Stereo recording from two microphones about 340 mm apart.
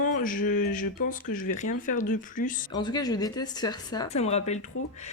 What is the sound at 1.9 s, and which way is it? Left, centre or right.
Speech, left.